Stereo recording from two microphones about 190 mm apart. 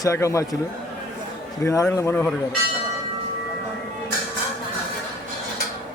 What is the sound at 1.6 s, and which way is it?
Speech, 15° left (ahead or behind).